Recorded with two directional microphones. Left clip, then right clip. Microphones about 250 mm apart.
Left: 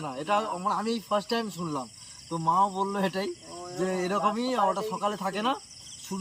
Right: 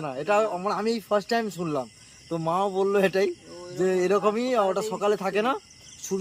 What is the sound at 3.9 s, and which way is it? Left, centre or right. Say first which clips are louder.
Speech: right 4 dB; centre.